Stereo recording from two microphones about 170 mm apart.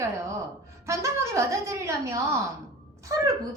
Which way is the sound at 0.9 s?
15° right (ahead or behind).